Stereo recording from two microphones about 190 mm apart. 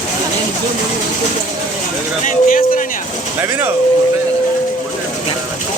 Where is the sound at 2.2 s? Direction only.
45° left (ahead or behind).